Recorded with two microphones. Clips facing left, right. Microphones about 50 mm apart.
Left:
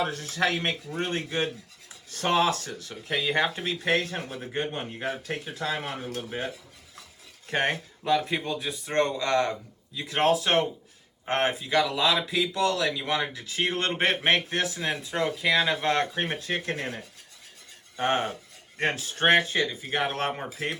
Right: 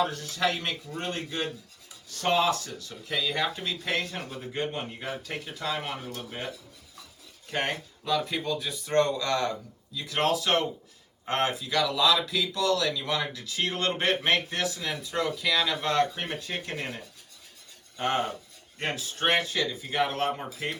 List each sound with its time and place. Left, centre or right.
0.0 s speech: left
7.4 s speech: left
17.9 s cutlery: left
18.8 s speech: left